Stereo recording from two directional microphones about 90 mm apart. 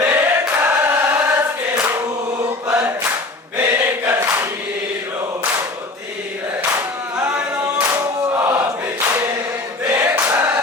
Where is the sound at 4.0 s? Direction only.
35° right (ahead or behind).